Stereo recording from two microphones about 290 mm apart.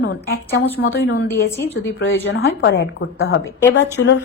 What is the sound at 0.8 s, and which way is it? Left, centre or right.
Speech, left.